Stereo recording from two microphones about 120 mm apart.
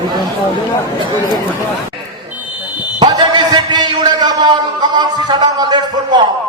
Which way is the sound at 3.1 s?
35° right (ahead or behind).